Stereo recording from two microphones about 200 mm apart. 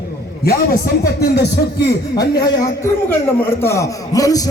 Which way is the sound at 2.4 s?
15° left (ahead or behind).